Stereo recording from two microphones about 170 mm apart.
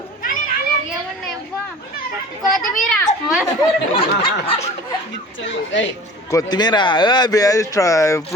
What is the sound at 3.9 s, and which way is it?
Snicker, 35° left (ahead or behind).